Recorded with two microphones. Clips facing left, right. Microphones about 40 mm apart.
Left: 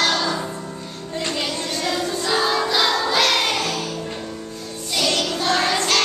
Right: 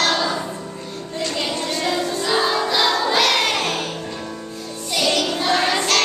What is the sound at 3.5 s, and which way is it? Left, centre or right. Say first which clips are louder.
Music: right 1 dB; right.